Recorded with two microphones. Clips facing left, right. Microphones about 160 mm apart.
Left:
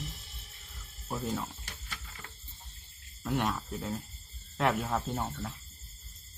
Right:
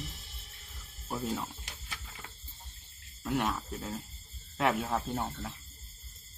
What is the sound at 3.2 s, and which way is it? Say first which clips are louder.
Speech: even; centre (ahead or behind).